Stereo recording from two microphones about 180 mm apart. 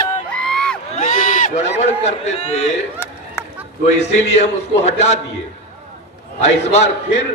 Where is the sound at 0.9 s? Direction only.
45° left (ahead or behind).